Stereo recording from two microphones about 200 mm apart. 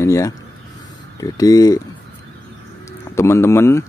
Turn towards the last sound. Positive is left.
turn(degrees=15)  # may be behind; listen again after turning